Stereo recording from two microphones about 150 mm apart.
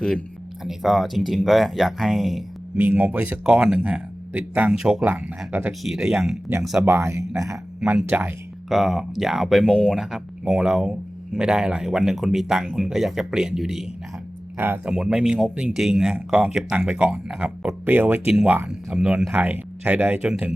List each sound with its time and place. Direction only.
0.6 s speech: centre (ahead or behind)
2.7 s speech: 15° right (ahead or behind)
6.8 s a man's voice: 15° right (ahead or behind)
7.8 s speech: 5° right (ahead or behind)